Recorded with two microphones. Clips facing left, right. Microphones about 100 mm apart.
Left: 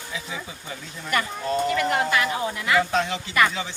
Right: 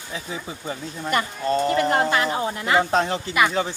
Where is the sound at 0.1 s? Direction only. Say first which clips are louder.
Right 3 dB; 40° right (ahead or behind).